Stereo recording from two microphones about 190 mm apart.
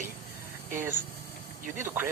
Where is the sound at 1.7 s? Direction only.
10° right (ahead or behind).